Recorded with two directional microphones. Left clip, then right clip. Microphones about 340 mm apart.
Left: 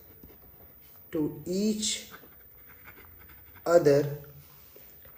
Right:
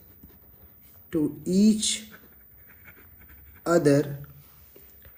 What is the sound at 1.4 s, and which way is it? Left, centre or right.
Speech, right.